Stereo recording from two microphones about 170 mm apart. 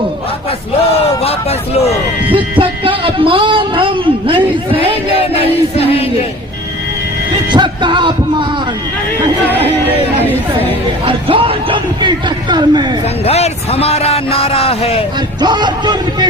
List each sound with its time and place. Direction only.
1.2 s hubbub: 40° left (ahead or behind)
2.3 s a sound: 30° right (ahead or behind)
5.1 s music: 35° left (ahead or behind)
7.5 s music: 25° right (ahead or behind)
11.0 s a man's voice: 30° right (ahead or behind)
13.2 s speech: 40° left (ahead or behind)
15.4 s speech: 25° right (ahead or behind)